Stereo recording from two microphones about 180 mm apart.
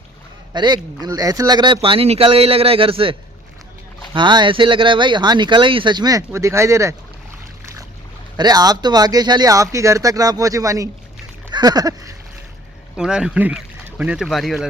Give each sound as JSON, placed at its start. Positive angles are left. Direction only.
{"t": 0.5, "sound": "speech", "side_deg": -25}
{"t": 7.6, "sound": "boat", "side_deg": -15}
{"t": 8.4, "sound": "speech", "side_deg": -20}
{"t": 13.0, "sound": "speech", "side_deg": -5}